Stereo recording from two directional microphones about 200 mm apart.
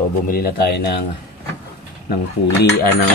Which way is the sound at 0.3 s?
50° left (ahead or behind).